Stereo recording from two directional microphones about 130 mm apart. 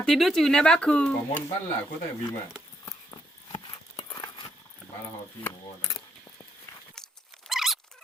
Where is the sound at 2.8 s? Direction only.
20° left (ahead or behind).